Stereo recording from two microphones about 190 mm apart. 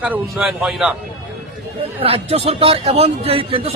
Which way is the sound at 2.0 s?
30° right (ahead or behind).